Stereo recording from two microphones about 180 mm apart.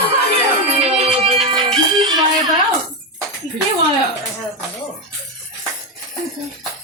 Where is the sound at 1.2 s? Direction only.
30° right (ahead or behind).